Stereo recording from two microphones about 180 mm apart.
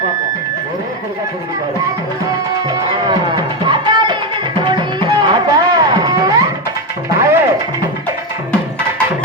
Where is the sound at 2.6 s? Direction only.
25° right (ahead or behind).